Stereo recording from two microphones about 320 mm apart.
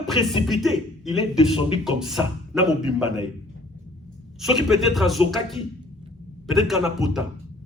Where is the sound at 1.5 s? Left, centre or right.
Centre.